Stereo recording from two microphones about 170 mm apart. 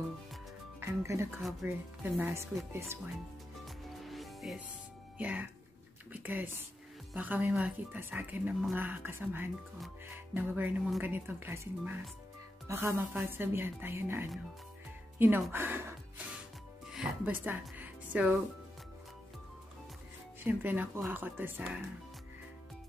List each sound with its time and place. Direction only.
0.7 s a woman's voice: 15° right (ahead or behind)
3.6 s music: centre (ahead or behind)
5.1 s a woman's voice: 10° right (ahead or behind)
16.8 s music: 5° right (ahead or behind)
20.4 s a woman's voice: 10° right (ahead or behind)